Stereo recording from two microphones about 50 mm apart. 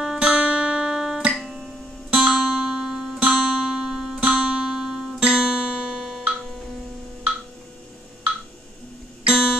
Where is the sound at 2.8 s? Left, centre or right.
Centre.